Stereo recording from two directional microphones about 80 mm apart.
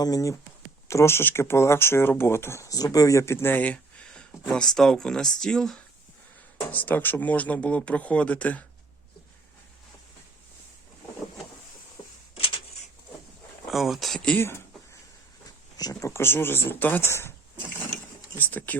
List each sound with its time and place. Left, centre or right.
0.0 s speech: left
0.9 s speech: left
2.6 s speech: left; by 5.8 s centre
6.7 s speech: left
13.7 s speech: centre
14.3 s speech: left
15.8 s speech: left
18.3 s speech: left